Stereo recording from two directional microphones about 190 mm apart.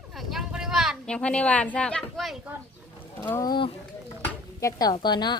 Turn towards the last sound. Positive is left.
turn(degrees=20)  # may be behind; listen again after turning